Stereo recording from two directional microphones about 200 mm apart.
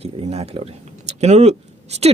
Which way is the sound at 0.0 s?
30° right (ahead or behind).